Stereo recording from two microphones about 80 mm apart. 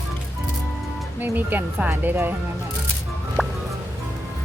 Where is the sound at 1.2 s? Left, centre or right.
Right.